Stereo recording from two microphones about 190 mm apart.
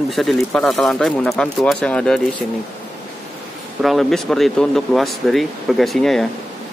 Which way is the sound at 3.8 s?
Centre (ahead or behind).